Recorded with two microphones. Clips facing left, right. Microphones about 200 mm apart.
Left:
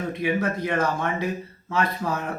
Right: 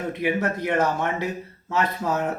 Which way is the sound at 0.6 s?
15° right (ahead or behind).